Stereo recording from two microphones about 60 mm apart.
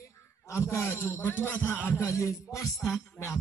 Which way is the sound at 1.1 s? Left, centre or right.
Left.